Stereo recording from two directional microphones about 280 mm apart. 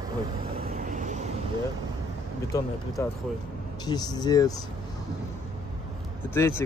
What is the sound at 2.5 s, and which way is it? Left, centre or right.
Speech, centre.